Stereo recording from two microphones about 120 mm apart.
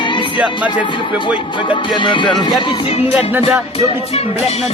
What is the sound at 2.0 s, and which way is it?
Music, 40° left (ahead or behind).